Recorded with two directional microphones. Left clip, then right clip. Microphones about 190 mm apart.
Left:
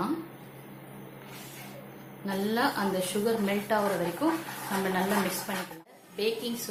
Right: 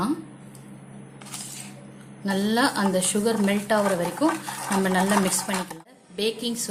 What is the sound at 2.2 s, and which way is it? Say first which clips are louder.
A woman's voice: right 5 dB; 55° right (ahead or behind).